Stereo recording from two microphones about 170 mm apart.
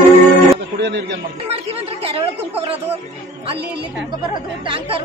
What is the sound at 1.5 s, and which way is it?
Speech, 35° right (ahead or behind).